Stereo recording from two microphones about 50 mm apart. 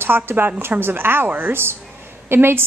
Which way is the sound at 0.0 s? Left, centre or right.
Right.